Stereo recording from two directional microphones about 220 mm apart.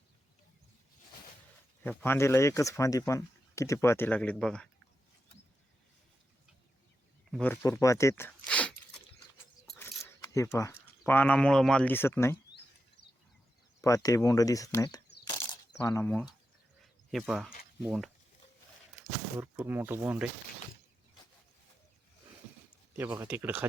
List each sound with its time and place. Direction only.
1.8 s speech: 10° left (ahead or behind)
7.3 s speech: 5° left (ahead or behind)
13.8 s speech: 15° left (ahead or behind)
16.8 s a sound: centre (ahead or behind)
17.7 s speech: centre (ahead or behind)
23.0 s speech: 10° right (ahead or behind)